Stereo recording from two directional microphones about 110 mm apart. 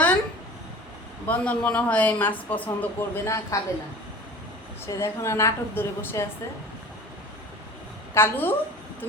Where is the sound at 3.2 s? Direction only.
25° left (ahead or behind).